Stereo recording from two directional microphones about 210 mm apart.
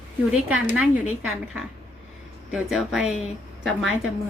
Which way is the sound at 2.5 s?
Centre (ahead or behind).